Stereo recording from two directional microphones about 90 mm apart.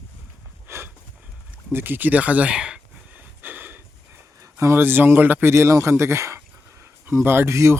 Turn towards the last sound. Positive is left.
turn(degrees=-30)  # may be behind; listen again after turning